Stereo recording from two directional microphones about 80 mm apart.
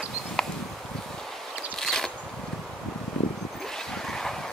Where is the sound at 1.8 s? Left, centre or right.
Centre.